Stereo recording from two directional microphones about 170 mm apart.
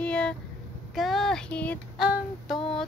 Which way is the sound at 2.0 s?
5° right (ahead or behind).